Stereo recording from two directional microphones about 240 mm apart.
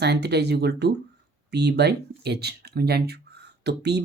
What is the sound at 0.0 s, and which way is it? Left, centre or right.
Speech, right.